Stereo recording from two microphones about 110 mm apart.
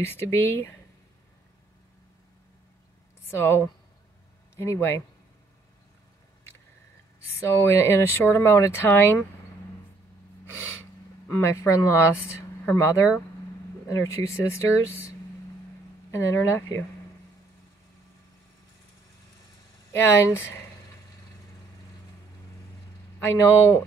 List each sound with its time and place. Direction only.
0.0 s speech: 20° left (ahead or behind)
3.3 s speech: 20° left (ahead or behind)
7.2 s speech: 25° left (ahead or behind)
10.4 s gasp: 15° right (ahead or behind)
10.8 s speech: 25° left (ahead or behind)
16.1 s speech: 25° left (ahead or behind)
20.0 s speech: 20° left (ahead or behind)
23.1 s speech: 20° left (ahead or behind)